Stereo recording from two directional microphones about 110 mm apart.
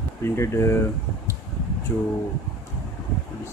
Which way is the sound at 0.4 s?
25° left (ahead or behind).